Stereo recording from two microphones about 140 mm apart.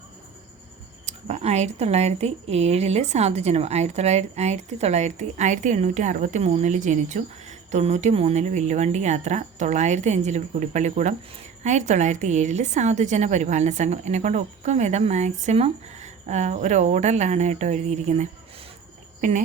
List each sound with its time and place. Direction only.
1.0 s a woman's voice: 55° right (ahead or behind)